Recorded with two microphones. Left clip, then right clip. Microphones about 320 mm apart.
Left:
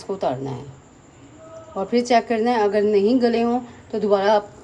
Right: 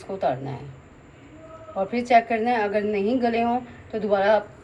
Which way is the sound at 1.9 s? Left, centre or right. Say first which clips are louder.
Left 1 dB; left.